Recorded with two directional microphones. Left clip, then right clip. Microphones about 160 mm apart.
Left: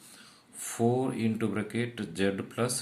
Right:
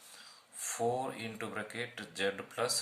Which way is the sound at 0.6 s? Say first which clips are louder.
Left 5 dB; 15° left (ahead or behind).